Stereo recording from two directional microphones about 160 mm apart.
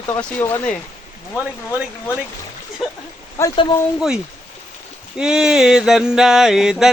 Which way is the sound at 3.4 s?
15° left (ahead or behind).